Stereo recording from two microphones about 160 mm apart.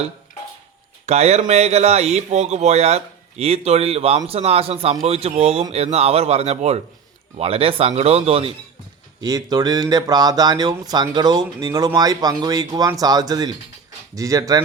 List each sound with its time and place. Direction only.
1.0 s speech: 45° right (ahead or behind)
9.2 s speech: 25° right (ahead or behind)